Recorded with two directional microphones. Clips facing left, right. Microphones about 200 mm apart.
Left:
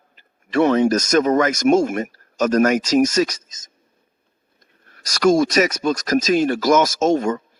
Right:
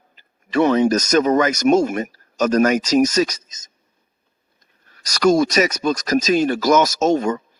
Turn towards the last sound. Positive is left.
turn(degrees=50)  # may be behind; listen again after turning